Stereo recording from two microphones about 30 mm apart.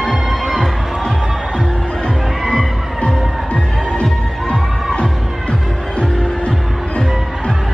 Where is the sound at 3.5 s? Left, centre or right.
Left.